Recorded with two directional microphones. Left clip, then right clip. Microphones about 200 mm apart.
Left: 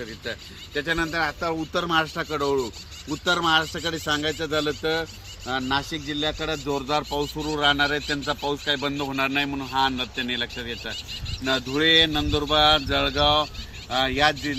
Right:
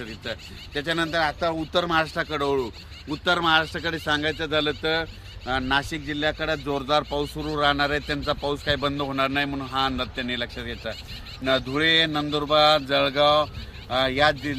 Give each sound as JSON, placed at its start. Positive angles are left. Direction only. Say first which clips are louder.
{"t": 0.3, "sound": "a man's voice", "louder": "even", "side_deg": -25}
{"t": 3.1, "sound": "a man's voice", "louder": "even", "side_deg": 15}